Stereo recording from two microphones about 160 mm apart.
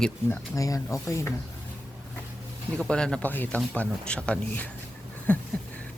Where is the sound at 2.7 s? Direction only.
5° left (ahead or behind).